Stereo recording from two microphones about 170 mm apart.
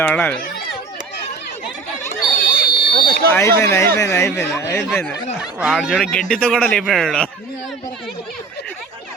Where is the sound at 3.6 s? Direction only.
15° left (ahead or behind).